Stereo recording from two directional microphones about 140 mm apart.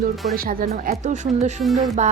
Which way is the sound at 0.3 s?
90° right.